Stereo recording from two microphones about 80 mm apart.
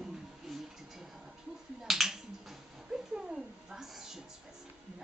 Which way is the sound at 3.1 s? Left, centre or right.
Centre.